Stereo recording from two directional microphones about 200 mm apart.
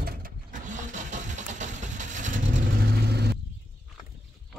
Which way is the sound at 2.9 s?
55° right (ahead or behind).